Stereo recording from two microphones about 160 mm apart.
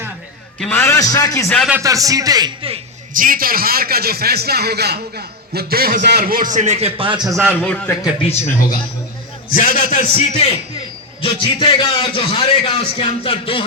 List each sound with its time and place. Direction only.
0.6 s a man's voice: 15° left (ahead or behind)
1.5 s speech: 5° left (ahead or behind)
1.8 s a man's voice: 20° right (ahead or behind)
3.1 s a man's voice: 60° right (ahead or behind); by 7.3 s 35° right (ahead or behind)
7.3 s a man's voice: centre (ahead or behind)
9.5 s a man's voice: 60° left (ahead or behind)
11.2 s a man's voice: 30° left (ahead or behind)